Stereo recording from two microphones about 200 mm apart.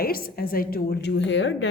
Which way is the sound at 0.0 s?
45° left (ahead or behind).